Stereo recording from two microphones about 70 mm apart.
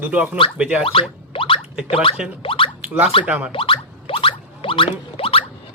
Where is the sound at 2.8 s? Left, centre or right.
Right.